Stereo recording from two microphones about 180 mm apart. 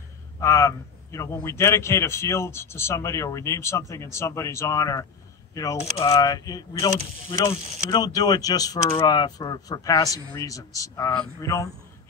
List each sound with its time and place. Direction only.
0.4 s a man's voice: 15° left (ahead or behind)